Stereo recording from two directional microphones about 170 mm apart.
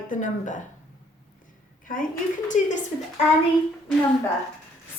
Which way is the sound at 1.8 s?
55° left (ahead or behind).